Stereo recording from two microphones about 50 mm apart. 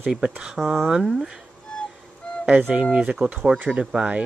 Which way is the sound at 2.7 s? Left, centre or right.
Right.